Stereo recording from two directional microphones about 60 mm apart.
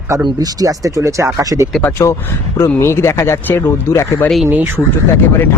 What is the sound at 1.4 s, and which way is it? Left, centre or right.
Speech, right.